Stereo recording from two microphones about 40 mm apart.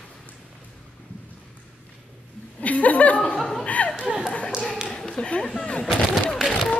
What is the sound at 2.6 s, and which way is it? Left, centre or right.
Laughter, left.